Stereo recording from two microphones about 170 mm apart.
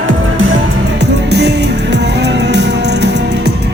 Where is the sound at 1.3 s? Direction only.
80° right.